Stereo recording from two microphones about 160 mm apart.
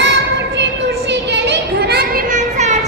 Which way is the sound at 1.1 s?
90° right.